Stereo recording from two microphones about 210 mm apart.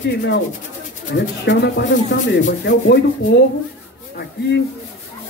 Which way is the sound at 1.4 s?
55° left (ahead or behind).